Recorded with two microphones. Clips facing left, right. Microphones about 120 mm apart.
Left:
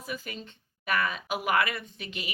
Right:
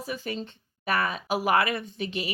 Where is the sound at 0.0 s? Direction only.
35° right (ahead or behind).